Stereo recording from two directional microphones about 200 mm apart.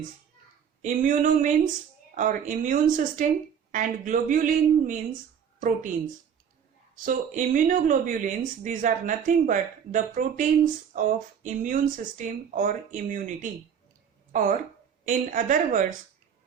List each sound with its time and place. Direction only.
0.8 s a woman's voice: 35° right (ahead or behind)
6.9 s speech: 40° right (ahead or behind)